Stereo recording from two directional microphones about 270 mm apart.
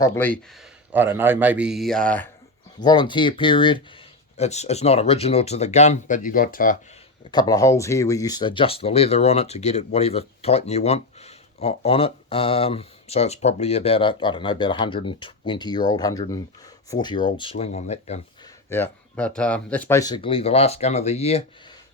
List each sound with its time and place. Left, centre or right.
0.0 s speech: centre
0.9 s speech: centre
2.8 s speech: centre
7.3 s speech: centre
18.7 s speech: centre; by 21.4 s left